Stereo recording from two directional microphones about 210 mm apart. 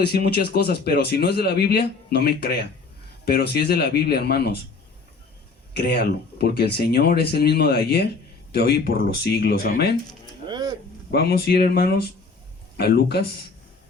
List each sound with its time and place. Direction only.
0.0 s speech: 50° left (ahead or behind)
5.7 s speech: 50° left (ahead or behind)
10.4 s a sound: 20° right (ahead or behind)
11.1 s speech: 50° left (ahead or behind)